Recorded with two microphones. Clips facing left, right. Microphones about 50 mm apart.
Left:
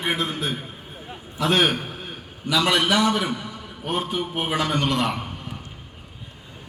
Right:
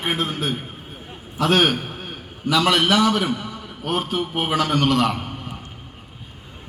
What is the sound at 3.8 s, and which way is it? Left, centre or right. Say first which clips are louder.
A man's voice: right 2 dB; right.